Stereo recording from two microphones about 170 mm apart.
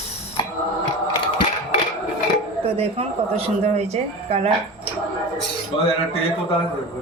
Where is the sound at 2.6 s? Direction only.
35° right (ahead or behind).